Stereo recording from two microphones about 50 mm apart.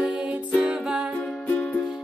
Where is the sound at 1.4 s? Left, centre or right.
Left.